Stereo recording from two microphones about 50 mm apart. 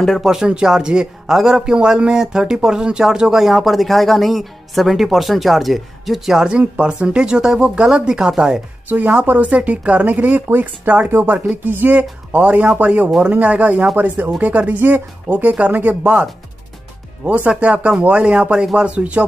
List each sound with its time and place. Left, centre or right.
0.2 s a man's voice: centre
6.8 s a man's voice: centre
8.8 s speech: right
9.5 s speech: right
11.1 s speech: right
11.9 s speech: right
13.9 s speech: right
14.4 s speech: right